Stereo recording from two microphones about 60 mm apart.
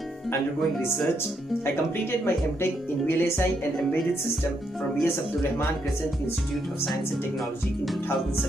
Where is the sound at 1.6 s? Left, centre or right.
Left.